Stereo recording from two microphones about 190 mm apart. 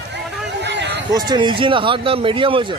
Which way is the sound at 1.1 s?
20° right (ahead or behind).